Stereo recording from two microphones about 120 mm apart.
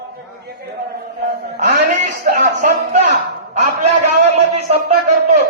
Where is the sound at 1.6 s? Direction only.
90° right.